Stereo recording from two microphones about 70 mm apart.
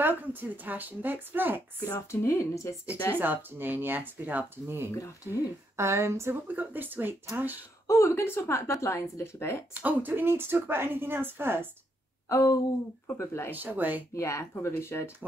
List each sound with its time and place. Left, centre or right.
0.0 s speech: right
1.9 s speech: left
3.2 s speech: right
4.9 s speech: left
5.8 s a woman's voice: right
6.4 s speech: right
7.8 s speech: left
9.8 s a woman's voice: right
12.3 s speech: left
13.0 s speech: left
13.5 s speech: right
14.1 s speech: left